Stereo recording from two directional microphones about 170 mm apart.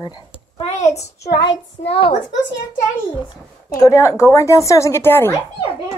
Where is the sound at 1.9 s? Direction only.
35° left (ahead or behind).